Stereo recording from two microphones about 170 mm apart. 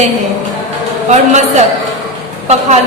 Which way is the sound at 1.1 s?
45° right (ahead or behind).